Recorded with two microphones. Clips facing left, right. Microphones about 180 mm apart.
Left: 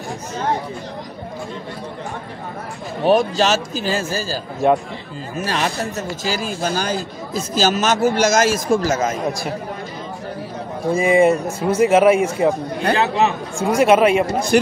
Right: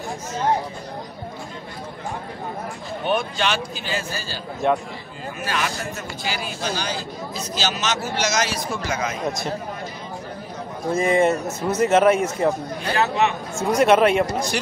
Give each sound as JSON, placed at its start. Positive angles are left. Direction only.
{"t": 3.0, "sound": "a man's voice", "side_deg": 35}
{"t": 5.4, "sound": "a man's voice", "side_deg": 35}
{"t": 10.9, "sound": "speech", "side_deg": 10}
{"t": 12.9, "sound": "a man's voice", "side_deg": 60}
{"t": 13.6, "sound": "speech", "side_deg": 10}
{"t": 14.5, "sound": "a man's voice", "side_deg": 50}